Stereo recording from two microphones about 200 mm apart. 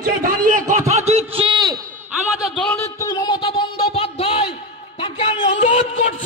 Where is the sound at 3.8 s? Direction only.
30° left (ahead or behind).